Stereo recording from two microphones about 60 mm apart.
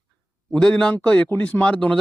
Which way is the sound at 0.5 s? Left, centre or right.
Centre.